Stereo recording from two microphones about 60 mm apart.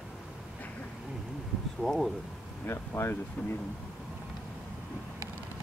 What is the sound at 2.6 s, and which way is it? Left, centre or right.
Speech, left.